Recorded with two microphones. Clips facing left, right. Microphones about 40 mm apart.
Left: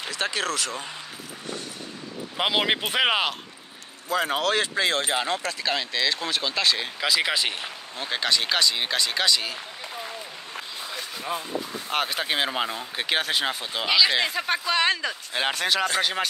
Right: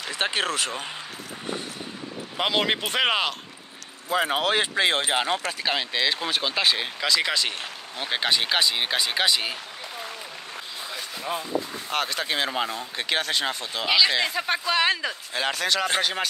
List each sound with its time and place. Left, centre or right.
0.1 s speech: right
2.3 s speech: centre
4.1 s speech: centre
7.0 s speech: centre
8.0 s speech: centre
10.8 s a sound: centre
11.9 s speech: centre
13.8 s speech: centre
15.3 s speech: left
16.0 s speech: centre